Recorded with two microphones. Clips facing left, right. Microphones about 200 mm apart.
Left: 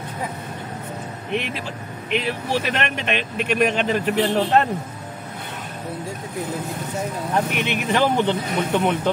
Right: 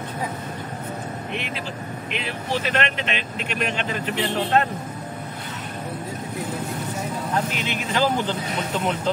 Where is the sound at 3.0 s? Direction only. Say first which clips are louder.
Left 5 dB; 50° left (ahead or behind).